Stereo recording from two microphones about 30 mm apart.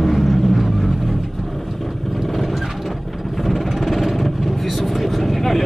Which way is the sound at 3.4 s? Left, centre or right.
Centre.